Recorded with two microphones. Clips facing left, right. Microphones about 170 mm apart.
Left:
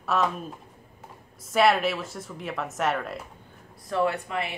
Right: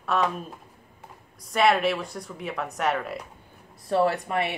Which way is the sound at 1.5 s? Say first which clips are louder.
Even; centre (ahead or behind).